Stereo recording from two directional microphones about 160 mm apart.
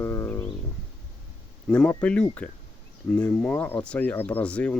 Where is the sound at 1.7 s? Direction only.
10° left (ahead or behind).